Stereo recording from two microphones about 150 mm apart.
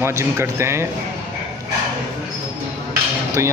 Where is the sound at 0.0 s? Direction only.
15° right (ahead or behind).